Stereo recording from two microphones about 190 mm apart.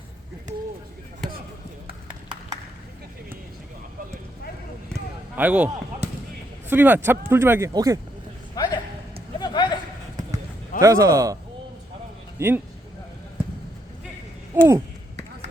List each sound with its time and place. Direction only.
5.4 s speech: 10° right (ahead or behind)
8.5 s a sound: 20° left (ahead or behind)
10.8 s speech: 15° right (ahead or behind)
12.4 s speech: 10° right (ahead or behind)
14.5 s speech: 10° right (ahead or behind)